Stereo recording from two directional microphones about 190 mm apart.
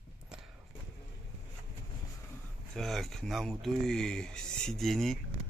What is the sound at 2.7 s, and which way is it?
Speech, centre (ahead or behind).